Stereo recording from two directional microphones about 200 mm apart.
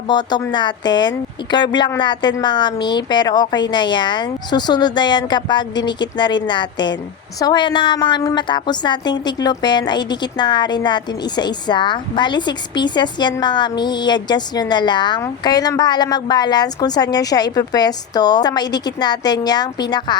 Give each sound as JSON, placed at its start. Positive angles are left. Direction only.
{"t": 0.1, "sound": "a woman's voice", "side_deg": 20}